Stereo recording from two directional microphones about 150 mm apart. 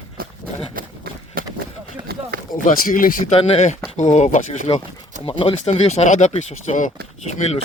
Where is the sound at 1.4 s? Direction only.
75° right (ahead or behind).